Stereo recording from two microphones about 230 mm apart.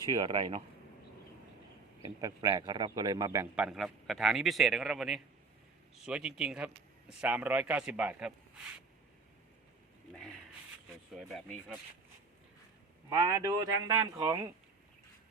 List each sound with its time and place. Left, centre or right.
0.1 s speech: centre
2.0 s a man's voice: centre
3.5 s a man's voice: centre
10.1 s a sound: centre
11.1 s a man's voice: centre
13.1 s a man's voice: centre